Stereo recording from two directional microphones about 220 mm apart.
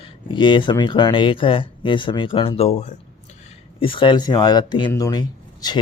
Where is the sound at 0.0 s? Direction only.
20° left (ahead or behind).